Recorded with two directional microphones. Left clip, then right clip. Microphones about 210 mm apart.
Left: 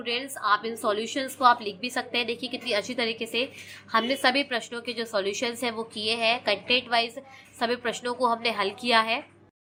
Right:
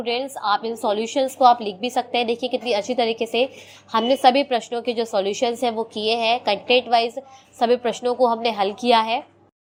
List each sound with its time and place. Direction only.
0.0 s a woman's voice: 15° right (ahead or behind)